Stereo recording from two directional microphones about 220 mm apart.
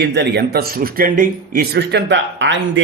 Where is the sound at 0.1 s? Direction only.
50° right (ahead or behind).